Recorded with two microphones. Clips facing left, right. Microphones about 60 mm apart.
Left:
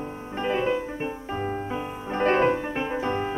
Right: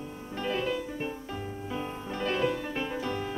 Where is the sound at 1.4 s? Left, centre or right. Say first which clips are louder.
Left 9 dB; left.